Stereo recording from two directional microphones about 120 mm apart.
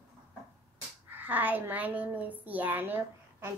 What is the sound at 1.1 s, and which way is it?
A child's voice, 15° right (ahead or behind).